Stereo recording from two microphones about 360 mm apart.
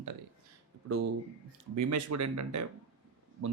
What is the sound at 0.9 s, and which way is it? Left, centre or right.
Speech, right.